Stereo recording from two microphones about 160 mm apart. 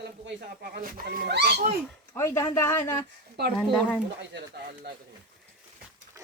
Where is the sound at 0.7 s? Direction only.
75° right (ahead or behind).